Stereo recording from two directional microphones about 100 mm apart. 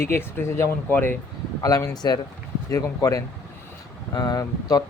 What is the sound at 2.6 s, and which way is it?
Speech, 30° left (ahead or behind).